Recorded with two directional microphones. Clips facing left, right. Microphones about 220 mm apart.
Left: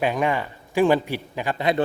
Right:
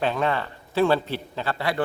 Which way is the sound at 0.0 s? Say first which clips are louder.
Left 2 dB; 15° left (ahead or behind).